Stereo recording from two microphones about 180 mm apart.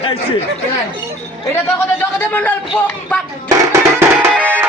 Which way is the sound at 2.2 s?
10° left (ahead or behind).